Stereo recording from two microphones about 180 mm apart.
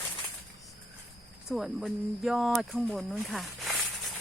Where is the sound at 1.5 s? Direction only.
Centre (ahead or behind).